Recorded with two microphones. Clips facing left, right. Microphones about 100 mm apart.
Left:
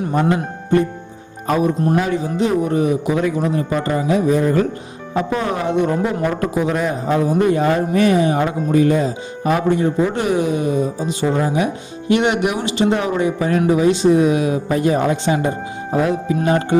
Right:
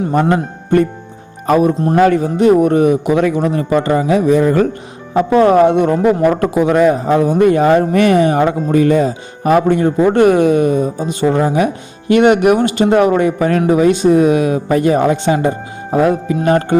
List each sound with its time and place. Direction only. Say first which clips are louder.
0.1 s a man's voice: right 2 dB; 60° right (ahead or behind); by 4.6 s 85° right
5.1 s speech: right 11 dB; 60° right (ahead or behind)